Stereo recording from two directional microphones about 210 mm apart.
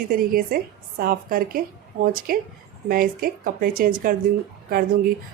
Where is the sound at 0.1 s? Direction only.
45° right (ahead or behind).